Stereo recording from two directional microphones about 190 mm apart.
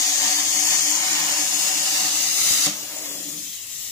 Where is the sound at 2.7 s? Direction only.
15° left (ahead or behind).